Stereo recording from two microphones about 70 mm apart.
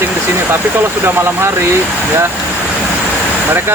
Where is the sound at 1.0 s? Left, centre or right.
Right.